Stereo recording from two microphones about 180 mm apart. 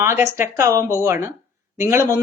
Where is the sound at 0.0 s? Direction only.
15° right (ahead or behind).